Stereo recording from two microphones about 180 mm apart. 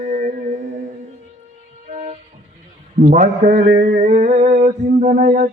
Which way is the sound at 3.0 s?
40° right (ahead or behind).